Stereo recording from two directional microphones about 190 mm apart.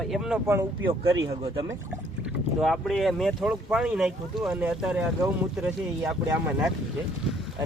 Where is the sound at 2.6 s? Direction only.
Centre (ahead or behind).